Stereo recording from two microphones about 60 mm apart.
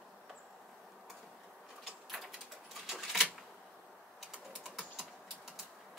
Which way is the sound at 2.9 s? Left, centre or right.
Centre.